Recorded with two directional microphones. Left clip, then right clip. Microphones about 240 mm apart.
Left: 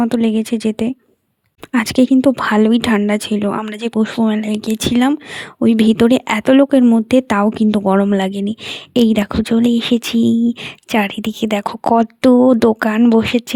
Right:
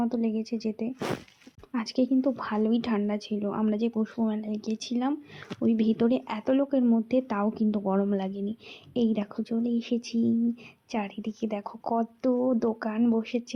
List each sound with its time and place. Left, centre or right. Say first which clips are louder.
0.0 s speech: left 13 dB; left